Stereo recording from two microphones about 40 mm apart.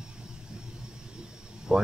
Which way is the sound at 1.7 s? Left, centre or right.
Right.